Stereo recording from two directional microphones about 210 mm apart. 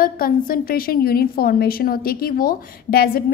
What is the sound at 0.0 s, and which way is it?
A woman's voice, 45° left (ahead or behind).